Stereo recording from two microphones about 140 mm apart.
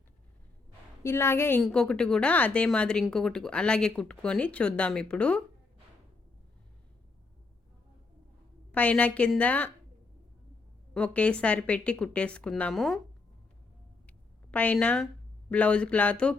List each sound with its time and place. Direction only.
1.0 s a woman's voice: 15° left (ahead or behind)
1.6 s a woman's voice: 5° left (ahead or behind)
8.7 s a woman's voice: 10° left (ahead or behind)
10.9 s a woman's voice: 10° left (ahead or behind)
14.1 s speech: 10° left (ahead or behind)